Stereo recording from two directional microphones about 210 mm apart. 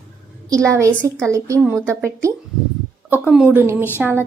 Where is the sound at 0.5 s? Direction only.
15° right (ahead or behind).